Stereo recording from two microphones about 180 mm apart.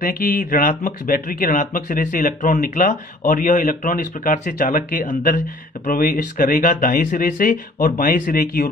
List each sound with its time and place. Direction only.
0.0 s speech: 50° left (ahead or behind)